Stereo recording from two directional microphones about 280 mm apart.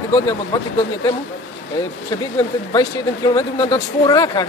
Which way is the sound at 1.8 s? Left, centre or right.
Centre.